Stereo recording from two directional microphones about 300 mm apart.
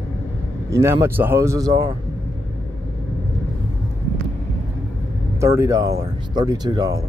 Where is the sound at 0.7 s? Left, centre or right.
Centre.